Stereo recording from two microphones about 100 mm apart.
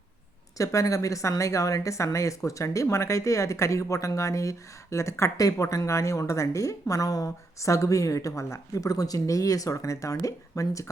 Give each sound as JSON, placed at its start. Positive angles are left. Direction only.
{"t": 0.5, "sound": "a woman's voice", "side_deg": 35}